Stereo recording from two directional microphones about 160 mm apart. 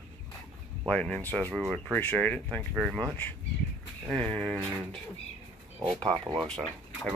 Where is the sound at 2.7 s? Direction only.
5° right (ahead or behind).